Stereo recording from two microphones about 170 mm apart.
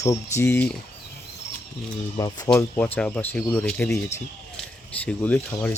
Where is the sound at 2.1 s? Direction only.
20° left (ahead or behind).